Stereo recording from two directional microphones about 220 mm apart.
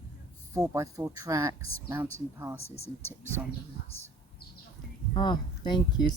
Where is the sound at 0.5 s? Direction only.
15° right (ahead or behind).